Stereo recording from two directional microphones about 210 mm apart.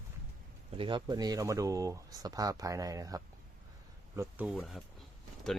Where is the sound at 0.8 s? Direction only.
20° right (ahead or behind).